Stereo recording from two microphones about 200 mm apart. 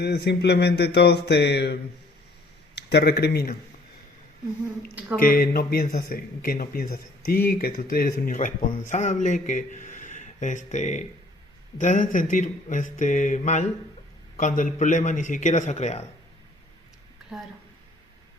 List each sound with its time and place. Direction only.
0.0 s a sound: 55° left (ahead or behind)
2.7 s speech: 55° left (ahead or behind)
5.2 s speech: 45° left (ahead or behind)